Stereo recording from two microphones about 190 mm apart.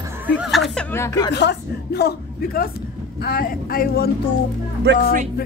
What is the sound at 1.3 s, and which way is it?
A woman's voice, 60° left (ahead or behind).